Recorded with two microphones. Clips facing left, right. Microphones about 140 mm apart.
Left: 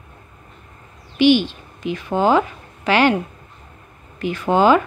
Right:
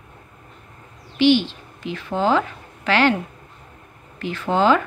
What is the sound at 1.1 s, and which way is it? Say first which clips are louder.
A woman's voice: left 2 dB; 15° left (ahead or behind).